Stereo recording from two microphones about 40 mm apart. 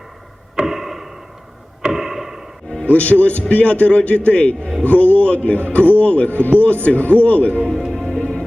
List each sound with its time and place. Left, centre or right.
0.6 s arrow: centre
1.8 s clock: centre
2.8 s a man's voice: left
7.7 s music: centre
8.2 s music: centre